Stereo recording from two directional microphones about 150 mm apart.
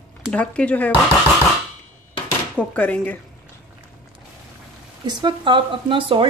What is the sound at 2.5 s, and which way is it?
Speech, 10° left (ahead or behind).